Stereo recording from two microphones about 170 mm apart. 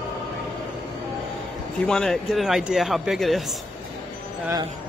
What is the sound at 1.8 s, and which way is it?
Speech, 5° left (ahead or behind).